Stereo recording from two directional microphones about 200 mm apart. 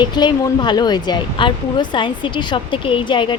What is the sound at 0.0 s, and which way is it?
Speech, 20° left (ahead or behind).